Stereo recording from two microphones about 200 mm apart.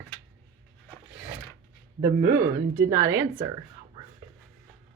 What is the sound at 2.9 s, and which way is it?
Speech, 15° right (ahead or behind).